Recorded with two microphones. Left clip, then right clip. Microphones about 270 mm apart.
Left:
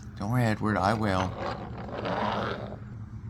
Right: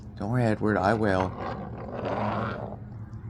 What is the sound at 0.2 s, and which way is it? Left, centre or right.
Speech, left.